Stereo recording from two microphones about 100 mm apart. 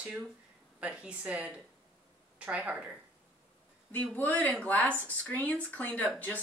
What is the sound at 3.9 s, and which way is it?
A woman's voice, 20° left (ahead or behind).